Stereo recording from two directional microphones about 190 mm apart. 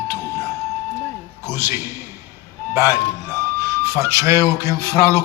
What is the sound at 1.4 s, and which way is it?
Speech, 10° right (ahead or behind).